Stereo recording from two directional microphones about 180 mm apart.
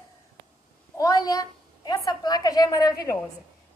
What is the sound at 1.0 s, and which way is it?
A woman's voice, 20° left (ahead or behind).